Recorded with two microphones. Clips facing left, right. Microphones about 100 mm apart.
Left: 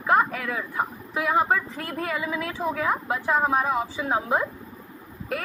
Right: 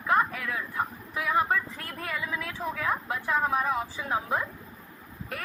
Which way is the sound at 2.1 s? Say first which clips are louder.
Left 4 dB; 90° left.